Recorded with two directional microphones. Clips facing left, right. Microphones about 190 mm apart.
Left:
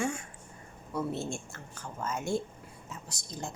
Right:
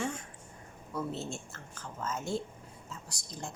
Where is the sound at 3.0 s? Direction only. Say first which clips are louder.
Left 4 dB; 20° left (ahead or behind).